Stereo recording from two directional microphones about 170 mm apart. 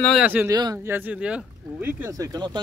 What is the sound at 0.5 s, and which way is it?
Speech, 20° right (ahead or behind).